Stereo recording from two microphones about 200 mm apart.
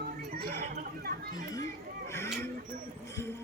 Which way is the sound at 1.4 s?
15° left (ahead or behind).